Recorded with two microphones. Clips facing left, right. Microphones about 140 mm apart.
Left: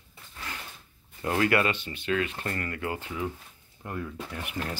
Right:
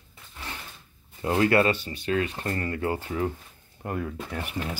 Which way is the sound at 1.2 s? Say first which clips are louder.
Right 3 dB; 25° right (ahead or behind).